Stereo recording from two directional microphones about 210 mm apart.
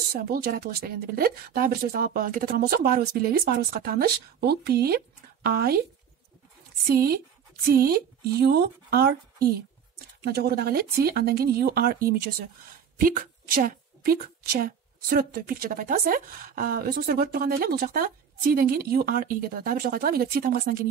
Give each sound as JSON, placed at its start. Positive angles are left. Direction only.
{"t": 0.1, "sound": "a woman's voice", "side_deg": -45}
{"t": 6.9, "sound": "a woman's voice", "side_deg": -45}